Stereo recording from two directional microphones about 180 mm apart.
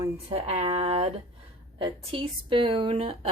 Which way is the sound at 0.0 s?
35° right (ahead or behind).